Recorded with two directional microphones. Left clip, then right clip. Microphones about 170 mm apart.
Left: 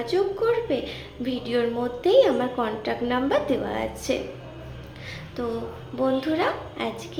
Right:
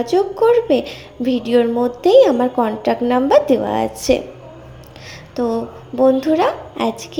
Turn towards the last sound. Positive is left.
turn(degrees=-45)  # may be behind; listen again after turning